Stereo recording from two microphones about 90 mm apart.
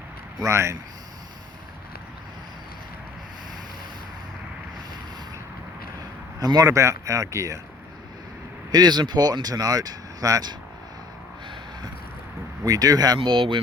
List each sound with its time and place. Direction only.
0.4 s speech: 30° right (ahead or behind)
6.4 s speech: 45° right (ahead or behind)
8.7 s speech: 50° right (ahead or behind)
12.6 s speech: 45° right (ahead or behind)
13.1 s speech: 75° right (ahead or behind)